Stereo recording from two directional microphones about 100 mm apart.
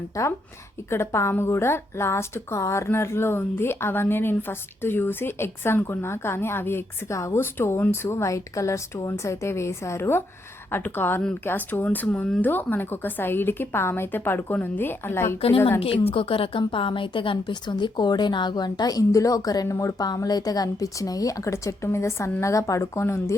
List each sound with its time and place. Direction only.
0.1 s a woman's voice: 30° left (ahead or behind)
15.4 s a woman's voice: 80° left
16.1 s a woman's voice: 65° left (ahead or behind); by 23.3 s 25° left (ahead or behind)